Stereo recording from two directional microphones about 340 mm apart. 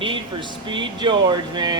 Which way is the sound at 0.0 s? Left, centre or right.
Centre.